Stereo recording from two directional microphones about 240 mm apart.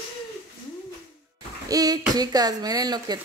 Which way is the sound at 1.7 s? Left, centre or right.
Centre.